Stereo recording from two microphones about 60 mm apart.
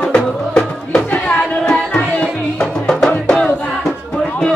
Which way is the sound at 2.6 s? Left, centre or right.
Centre.